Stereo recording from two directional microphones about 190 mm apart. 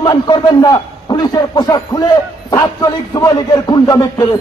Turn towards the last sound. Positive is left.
turn(degrees=20)  # may be behind; listen again after turning